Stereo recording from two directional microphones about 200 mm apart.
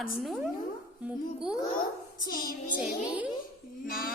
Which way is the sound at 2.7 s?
5° right (ahead or behind).